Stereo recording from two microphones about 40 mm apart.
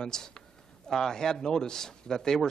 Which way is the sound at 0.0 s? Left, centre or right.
Centre.